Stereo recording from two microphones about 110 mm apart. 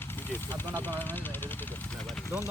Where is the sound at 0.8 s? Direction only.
15° left (ahead or behind).